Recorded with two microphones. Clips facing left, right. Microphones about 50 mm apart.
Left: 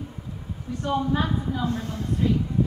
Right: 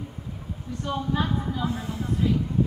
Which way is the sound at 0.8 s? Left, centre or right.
Centre.